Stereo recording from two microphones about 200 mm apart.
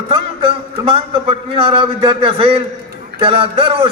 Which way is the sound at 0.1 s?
30° right (ahead or behind).